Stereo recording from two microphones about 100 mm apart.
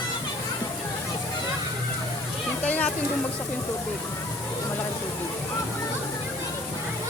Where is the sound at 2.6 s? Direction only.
15° left (ahead or behind).